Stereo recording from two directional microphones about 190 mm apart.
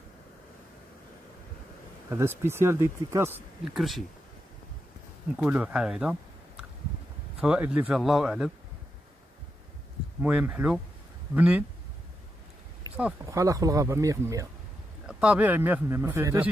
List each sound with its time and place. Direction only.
2.0 s speech: 15° right (ahead or behind)
3.7 s speech: centre (ahead or behind)
5.3 s speech: 5° right (ahead or behind)
10.2 s speech: 10° right (ahead or behind)
12.9 s speech: 10° right (ahead or behind)
15.0 s speech: 5° right (ahead or behind)